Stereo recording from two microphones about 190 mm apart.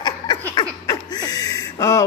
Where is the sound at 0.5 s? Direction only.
20° left (ahead or behind).